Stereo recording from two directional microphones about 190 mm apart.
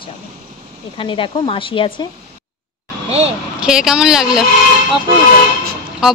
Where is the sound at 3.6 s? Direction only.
5° right (ahead or behind).